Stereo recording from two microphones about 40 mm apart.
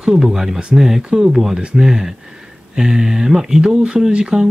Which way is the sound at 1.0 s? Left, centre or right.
Right.